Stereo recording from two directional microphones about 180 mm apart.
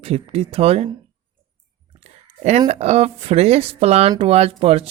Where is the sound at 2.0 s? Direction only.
35° right (ahead or behind).